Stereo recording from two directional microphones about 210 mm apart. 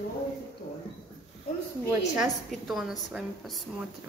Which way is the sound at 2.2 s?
Centre (ahead or behind).